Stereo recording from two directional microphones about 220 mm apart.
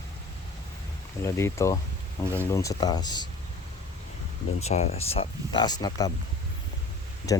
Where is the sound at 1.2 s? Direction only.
10° left (ahead or behind).